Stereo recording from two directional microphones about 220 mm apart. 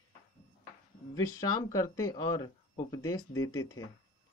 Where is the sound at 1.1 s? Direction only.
15° left (ahead or behind).